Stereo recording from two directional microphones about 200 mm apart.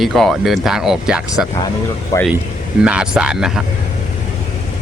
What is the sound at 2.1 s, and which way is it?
Speech, 15° left (ahead or behind).